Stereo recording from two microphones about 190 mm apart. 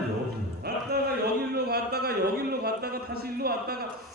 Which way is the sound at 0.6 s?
60° right (ahead or behind).